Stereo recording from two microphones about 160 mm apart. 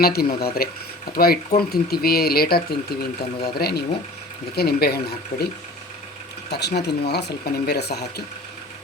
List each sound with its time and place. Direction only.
0.0 s speech: 75° left (ahead or behind)
5.3 s speech: 50° left (ahead or behind)
6.5 s speech: 90° left